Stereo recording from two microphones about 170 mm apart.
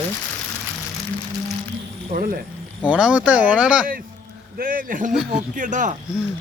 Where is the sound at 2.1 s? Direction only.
55° right (ahead or behind).